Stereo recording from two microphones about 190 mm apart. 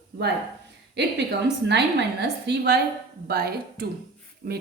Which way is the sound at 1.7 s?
65° right (ahead or behind).